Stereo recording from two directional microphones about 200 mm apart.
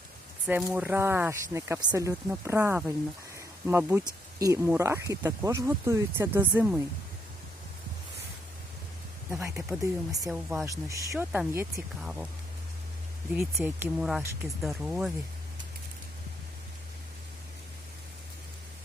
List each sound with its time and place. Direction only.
0.4 s speech: 5° right (ahead or behind)
9.3 s speech: 15° right (ahead or behind)
10.2 s speech: 5° right (ahead or behind)
13.3 s speech: 10° right (ahead or behind)
14.0 s speech: centre (ahead or behind)